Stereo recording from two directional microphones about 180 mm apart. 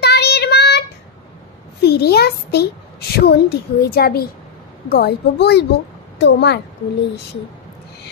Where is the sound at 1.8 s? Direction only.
65° left (ahead or behind).